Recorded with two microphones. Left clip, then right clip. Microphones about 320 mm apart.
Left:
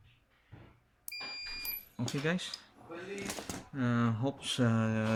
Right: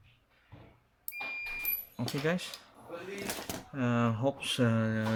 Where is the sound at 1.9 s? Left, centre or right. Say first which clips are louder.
Right 2 dB; centre.